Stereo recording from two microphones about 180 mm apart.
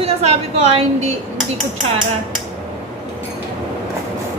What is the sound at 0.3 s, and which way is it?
Speech, 35° right (ahead or behind).